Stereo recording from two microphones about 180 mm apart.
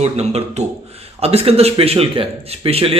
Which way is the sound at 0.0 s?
35° right (ahead or behind).